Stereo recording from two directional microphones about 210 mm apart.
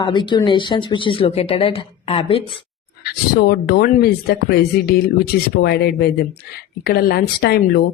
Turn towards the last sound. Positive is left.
turn(degrees=45)  # may be behind; listen again after turning